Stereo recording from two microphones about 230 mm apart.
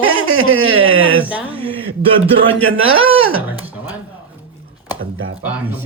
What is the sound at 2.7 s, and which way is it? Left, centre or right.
Speech, right.